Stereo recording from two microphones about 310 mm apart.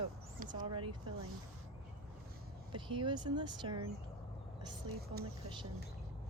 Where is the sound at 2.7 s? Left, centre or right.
Centre.